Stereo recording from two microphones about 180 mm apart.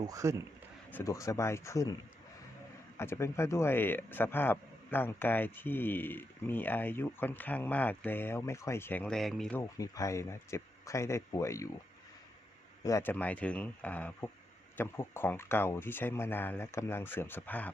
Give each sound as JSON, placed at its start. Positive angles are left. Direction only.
{"t": 0.0, "sound": "speech", "side_deg": -20}
{"t": 0.9, "sound": "speech", "side_deg": 15}
{"t": 3.0, "sound": "speech", "side_deg": 15}
{"t": 9.6, "sound": "speech", "side_deg": 20}
{"t": 12.8, "sound": "speech", "side_deg": 15}